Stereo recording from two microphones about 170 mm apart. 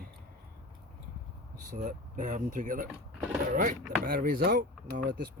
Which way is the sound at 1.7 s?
45° right (ahead or behind).